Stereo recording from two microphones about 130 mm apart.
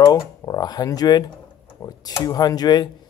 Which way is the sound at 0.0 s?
30° left (ahead or behind).